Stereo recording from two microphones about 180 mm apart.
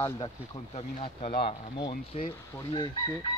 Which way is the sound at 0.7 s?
35° left (ahead or behind).